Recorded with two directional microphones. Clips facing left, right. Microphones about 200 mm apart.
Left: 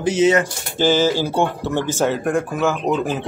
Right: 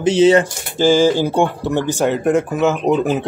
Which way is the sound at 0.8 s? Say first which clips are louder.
Right 4 dB; 10° right (ahead or behind).